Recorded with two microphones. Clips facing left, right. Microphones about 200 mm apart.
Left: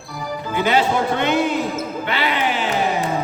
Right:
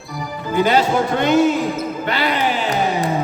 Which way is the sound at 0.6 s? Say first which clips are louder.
Right 2 dB; 40° right (ahead or behind).